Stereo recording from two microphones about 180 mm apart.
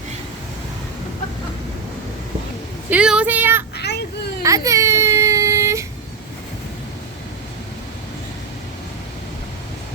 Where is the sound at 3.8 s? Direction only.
70° left (ahead or behind).